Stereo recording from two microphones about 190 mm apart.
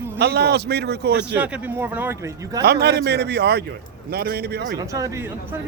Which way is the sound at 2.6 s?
60° right (ahead or behind).